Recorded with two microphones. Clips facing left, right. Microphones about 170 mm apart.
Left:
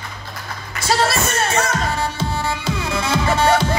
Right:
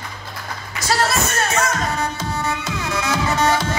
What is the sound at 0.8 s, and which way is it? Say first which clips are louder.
Music: left 1 dB; 30° left (ahead or behind).